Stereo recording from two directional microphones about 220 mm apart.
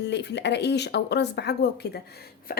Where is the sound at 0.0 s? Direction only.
50° left (ahead or behind).